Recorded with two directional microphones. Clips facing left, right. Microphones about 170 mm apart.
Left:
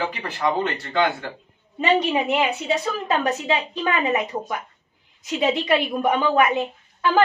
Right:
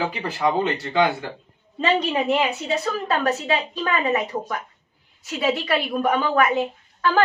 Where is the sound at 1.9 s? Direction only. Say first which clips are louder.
Left 1 dB; 10° left (ahead or behind).